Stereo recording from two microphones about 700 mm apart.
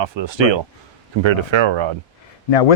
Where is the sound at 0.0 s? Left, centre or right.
Right.